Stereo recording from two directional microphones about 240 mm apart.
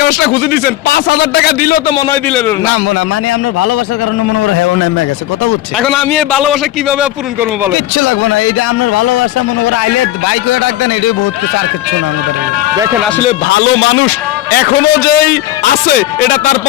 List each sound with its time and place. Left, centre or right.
0.0 s a man's voice: left
1.9 s a man's voice: centre
4.4 s a man's voice: left
5.8 s a man's voice: centre
7.9 s a man's voice: left
12.7 s speech: centre
13.5 s a man's voice: left